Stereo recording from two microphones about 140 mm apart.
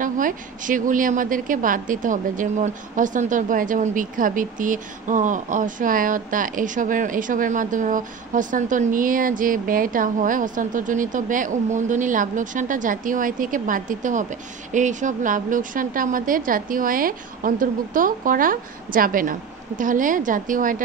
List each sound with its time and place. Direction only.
0.0 s a woman's voice: 70° right (ahead or behind)
19.8 s a woman's voice: 70° right (ahead or behind)